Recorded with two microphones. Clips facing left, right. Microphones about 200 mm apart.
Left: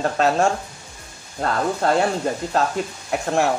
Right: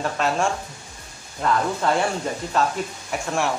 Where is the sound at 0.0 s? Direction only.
40° left (ahead or behind).